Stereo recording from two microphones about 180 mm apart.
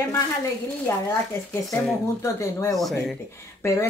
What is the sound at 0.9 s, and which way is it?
Speech, 15° left (ahead or behind).